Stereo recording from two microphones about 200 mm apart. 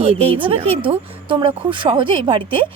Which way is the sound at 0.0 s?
30° right (ahead or behind).